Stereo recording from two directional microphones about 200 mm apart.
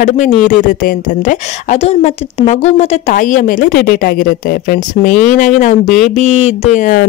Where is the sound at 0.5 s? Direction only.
40° left (ahead or behind).